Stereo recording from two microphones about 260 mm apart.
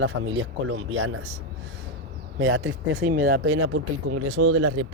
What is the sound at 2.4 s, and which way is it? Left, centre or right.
Speech, right.